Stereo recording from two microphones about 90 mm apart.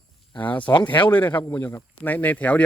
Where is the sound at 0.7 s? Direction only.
60° left (ahead or behind).